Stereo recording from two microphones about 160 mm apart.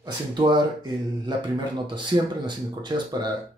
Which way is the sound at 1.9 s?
30° right (ahead or behind).